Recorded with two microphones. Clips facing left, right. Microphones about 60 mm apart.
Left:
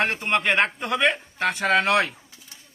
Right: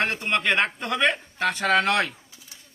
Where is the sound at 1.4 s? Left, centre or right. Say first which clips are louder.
Even; centre.